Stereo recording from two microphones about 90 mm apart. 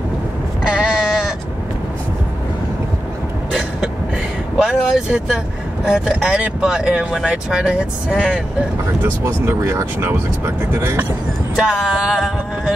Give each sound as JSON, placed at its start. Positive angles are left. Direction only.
{"t": 0.7, "sound": "sheep", "side_deg": -10}
{"t": 4.6, "sound": "vehicle", "side_deg": -5}
{"t": 5.9, "sound": "speech", "side_deg": -10}
{"t": 9.0, "sound": "speech", "side_deg": -30}
{"t": 11.5, "sound": "speech", "side_deg": -10}